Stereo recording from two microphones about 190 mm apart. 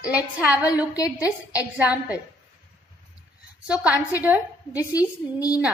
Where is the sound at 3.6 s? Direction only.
5° right (ahead or behind).